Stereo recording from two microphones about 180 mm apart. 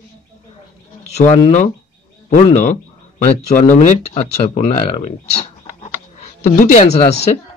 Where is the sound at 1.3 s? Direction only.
40° left (ahead or behind).